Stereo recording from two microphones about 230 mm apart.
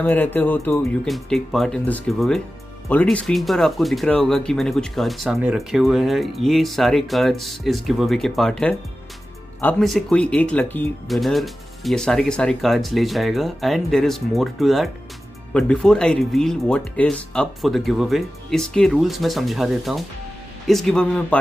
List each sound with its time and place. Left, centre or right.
0.0 s speech: centre